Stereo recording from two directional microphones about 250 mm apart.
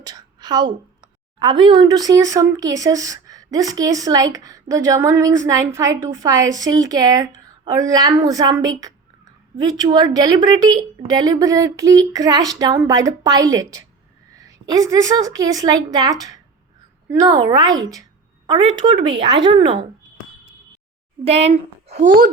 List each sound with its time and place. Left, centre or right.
0.0 s a sound: centre
1.6 s a woman's voice: centre
21.2 s a child's voice: right